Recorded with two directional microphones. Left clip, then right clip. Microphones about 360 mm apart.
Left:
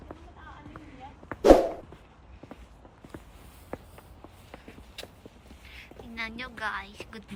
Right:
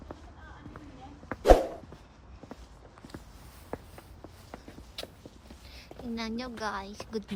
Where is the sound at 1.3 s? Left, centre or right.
Centre.